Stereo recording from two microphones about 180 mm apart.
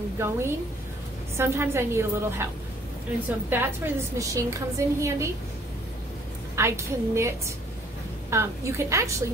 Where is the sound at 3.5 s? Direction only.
15° right (ahead or behind).